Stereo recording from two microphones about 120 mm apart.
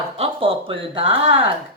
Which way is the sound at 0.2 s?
50° right (ahead or behind).